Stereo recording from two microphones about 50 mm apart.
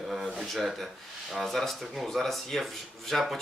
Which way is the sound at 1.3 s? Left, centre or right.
Centre.